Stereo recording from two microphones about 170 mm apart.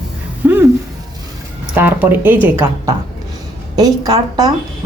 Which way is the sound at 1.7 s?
10° right (ahead or behind).